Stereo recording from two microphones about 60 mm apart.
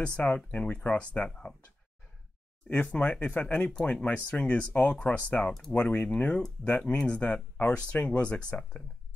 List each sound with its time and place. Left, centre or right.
0.0 s speech: centre
2.7 s speech: left